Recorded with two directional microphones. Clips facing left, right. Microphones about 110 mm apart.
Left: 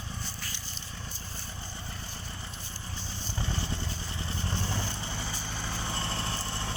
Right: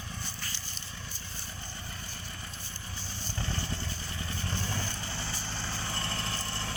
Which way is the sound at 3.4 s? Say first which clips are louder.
Left 1 dB; 15° left (ahead or behind).